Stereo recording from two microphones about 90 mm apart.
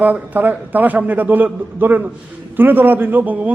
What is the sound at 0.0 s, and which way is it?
A man's voice, 20° right (ahead or behind).